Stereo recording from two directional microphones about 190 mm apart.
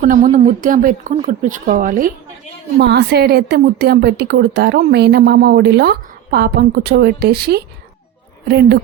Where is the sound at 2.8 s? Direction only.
60° right (ahead or behind).